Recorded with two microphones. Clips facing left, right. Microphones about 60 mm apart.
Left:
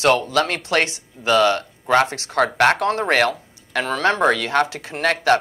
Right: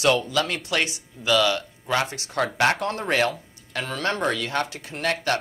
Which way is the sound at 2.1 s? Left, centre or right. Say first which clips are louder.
Left 6 dB; left.